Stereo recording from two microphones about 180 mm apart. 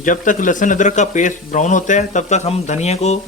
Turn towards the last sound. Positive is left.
turn(degrees=40)  # may be behind; listen again after turning